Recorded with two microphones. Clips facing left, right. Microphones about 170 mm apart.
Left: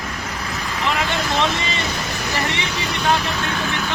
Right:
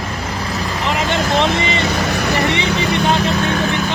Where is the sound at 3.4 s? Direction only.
50° right (ahead or behind).